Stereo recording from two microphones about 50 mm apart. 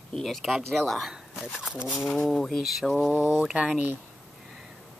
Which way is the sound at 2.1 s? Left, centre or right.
Centre.